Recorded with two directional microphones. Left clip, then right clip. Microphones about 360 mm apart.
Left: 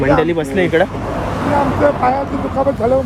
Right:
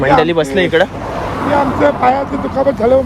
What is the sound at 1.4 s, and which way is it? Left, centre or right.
Speech, right.